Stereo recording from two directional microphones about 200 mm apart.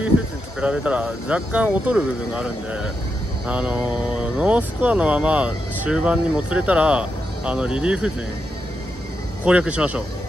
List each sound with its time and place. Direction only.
0.6 s speech: 5° right (ahead or behind)
9.4 s speech: 5° right (ahead or behind)